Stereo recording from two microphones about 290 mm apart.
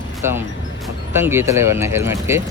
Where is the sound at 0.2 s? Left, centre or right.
Centre.